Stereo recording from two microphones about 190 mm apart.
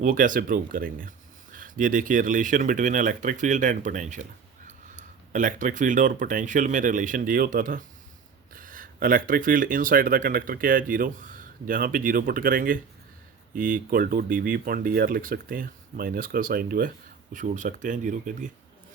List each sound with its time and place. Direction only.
0.0 s speech: 45° right (ahead or behind)